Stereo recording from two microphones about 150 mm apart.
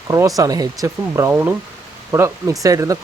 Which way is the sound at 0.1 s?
25° right (ahead or behind).